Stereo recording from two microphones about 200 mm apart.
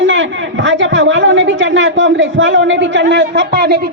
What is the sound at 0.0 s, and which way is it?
Speech, 70° right (ahead or behind).